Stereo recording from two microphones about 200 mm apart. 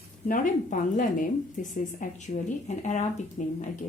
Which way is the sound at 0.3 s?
40° left (ahead or behind).